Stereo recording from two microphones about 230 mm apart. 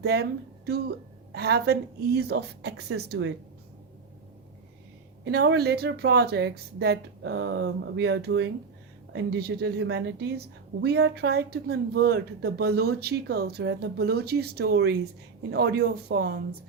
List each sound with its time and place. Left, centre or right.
0.0 s a woman's voice: right
5.2 s a woman's voice: right